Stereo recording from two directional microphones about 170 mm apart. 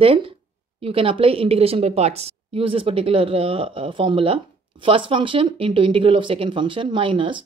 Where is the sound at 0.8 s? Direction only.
35° right (ahead or behind).